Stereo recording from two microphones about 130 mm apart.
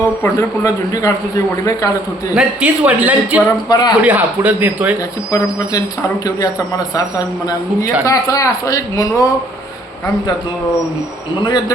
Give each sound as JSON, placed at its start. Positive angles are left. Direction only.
{"t": 0.2, "sound": "a man's voice", "side_deg": 25}
{"t": 2.3, "sound": "a man's voice", "side_deg": -10}
{"t": 3.7, "sound": "a man's voice", "side_deg": 30}
{"t": 4.0, "sound": "a man's voice", "side_deg": -10}
{"t": 5.3, "sound": "a man's voice", "side_deg": 30}